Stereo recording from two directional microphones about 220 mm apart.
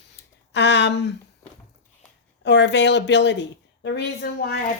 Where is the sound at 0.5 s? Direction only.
55° left (ahead or behind).